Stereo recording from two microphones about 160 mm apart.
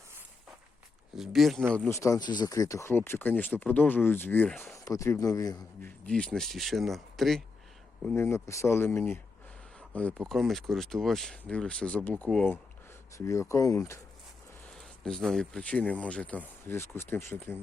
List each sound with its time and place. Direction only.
1.1 s speech: centre (ahead or behind)
1.9 s speech: 20° left (ahead or behind); by 4.7 s 5° left (ahead or behind)
4.7 s speech: 20° left (ahead or behind)
5.8 s speech: 5° left (ahead or behind)
8.1 s speech: 15° left (ahead or behind)
14.7 s speech: 5° left (ahead or behind)